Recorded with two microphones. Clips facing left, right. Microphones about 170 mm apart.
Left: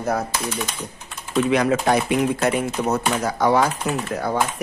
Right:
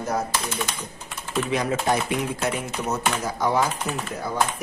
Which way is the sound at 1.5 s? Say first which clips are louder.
Left 4 dB; 85° left.